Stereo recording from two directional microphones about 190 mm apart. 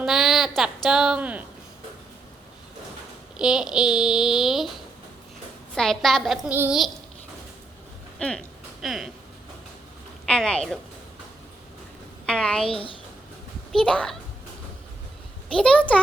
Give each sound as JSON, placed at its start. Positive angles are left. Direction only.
{"t": 0.0, "sound": "speech", "side_deg": 0}
{"t": 3.3, "sound": "speech", "side_deg": -5}
{"t": 8.2, "sound": "speech", "side_deg": 5}
{"t": 10.2, "sound": "speech", "side_deg": 5}
{"t": 12.2, "sound": "a woman's voice", "side_deg": 5}
{"t": 12.6, "sound": "speech", "side_deg": 30}
{"t": 13.7, "sound": "speech", "side_deg": 5}
{"t": 15.5, "sound": "speech", "side_deg": 5}